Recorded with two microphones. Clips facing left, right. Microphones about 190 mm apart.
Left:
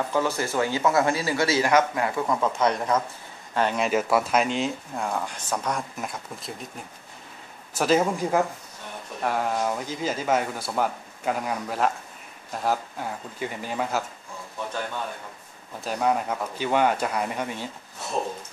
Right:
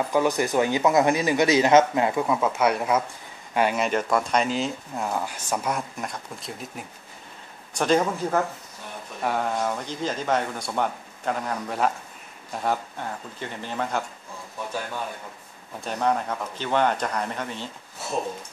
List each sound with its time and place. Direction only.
0.1 s speech: 15° right (ahead or behind)
2.2 s speech: 10° right (ahead or behind)
7.7 s speech: 5° left (ahead or behind)
15.8 s speech: 5° left (ahead or behind)